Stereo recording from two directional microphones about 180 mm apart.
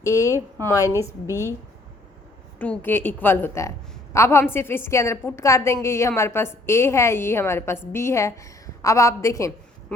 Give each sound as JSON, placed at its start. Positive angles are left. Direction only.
{"t": 0.0, "sound": "a woman's voice", "side_deg": 15}
{"t": 2.6, "sound": "a woman's voice", "side_deg": 10}